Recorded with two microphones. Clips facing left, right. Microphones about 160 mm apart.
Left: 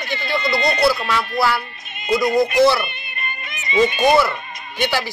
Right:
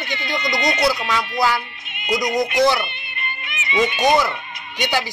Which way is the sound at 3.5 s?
40° left (ahead or behind).